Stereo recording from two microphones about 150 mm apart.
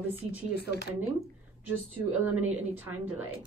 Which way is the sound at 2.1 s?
10° right (ahead or behind).